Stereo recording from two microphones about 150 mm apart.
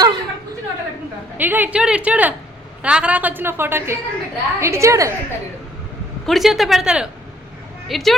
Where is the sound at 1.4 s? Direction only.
10° right (ahead or behind).